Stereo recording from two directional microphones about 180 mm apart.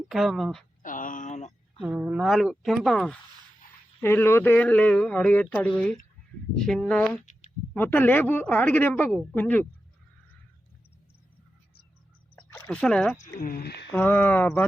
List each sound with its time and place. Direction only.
0.1 s speech: centre (ahead or behind)
0.8 s a sound: 45° left (ahead or behind)
1.8 s speech: 5° right (ahead or behind)
4.0 s speech: 15° left (ahead or behind)
12.4 s a sound: 5° left (ahead or behind)
13.1 s speech: 45° left (ahead or behind)
13.9 s speech: 10° left (ahead or behind)